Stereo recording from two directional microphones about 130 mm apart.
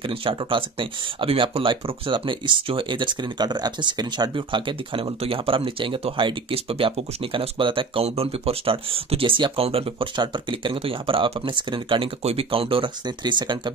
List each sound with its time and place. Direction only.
0.0 s speech: 40° right (ahead or behind)